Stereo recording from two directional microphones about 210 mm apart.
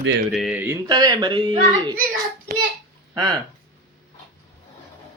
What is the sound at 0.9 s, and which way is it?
Speech, 20° right (ahead or behind).